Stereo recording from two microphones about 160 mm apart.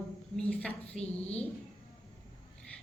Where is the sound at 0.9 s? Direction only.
40° left (ahead or behind).